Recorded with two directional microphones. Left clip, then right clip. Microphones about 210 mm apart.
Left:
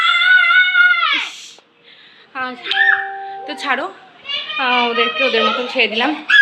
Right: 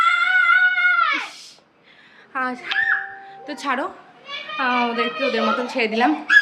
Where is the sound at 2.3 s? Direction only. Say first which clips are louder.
Even; 20° right (ahead or behind).